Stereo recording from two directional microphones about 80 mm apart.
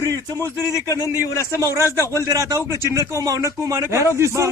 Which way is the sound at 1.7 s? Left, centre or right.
Right.